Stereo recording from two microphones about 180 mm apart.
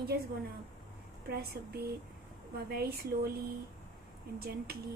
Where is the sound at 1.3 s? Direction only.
60° right (ahead or behind).